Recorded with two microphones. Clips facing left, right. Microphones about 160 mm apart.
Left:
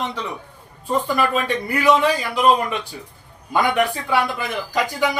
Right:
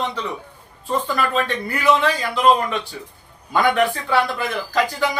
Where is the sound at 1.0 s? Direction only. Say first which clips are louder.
Left 1 dB; 10° left (ahead or behind).